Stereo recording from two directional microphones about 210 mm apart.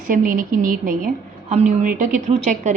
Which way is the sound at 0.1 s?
40° right (ahead or behind).